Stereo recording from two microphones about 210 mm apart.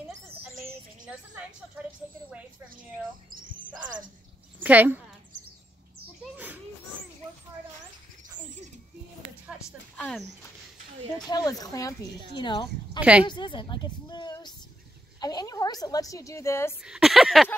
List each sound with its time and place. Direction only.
3.3 s chirp: 40° right (ahead or behind)
4.6 s speech: 10° right (ahead or behind)
6.3 s children playing: 10° right (ahead or behind)
9.5 s a sound: centre (ahead or behind)
11.2 s a woman's voice: 20° left (ahead or behind)
13.0 s speech: 5° right (ahead or behind)
13.3 s a woman's voice: 20° left (ahead or behind)
16.8 s speech: centre (ahead or behind)